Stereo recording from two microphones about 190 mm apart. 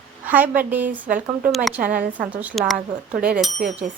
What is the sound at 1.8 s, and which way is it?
Speech, 45° right (ahead or behind).